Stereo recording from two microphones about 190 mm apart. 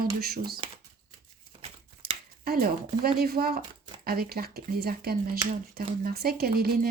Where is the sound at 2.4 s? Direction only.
55° right (ahead or behind).